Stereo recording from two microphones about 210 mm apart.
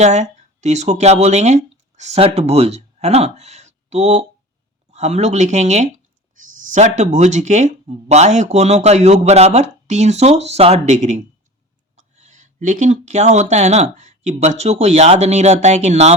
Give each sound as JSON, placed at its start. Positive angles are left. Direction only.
{"t": 0.0, "sound": "speech", "side_deg": -35}